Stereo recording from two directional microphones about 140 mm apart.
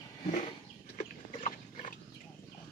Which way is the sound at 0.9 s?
65° left (ahead or behind).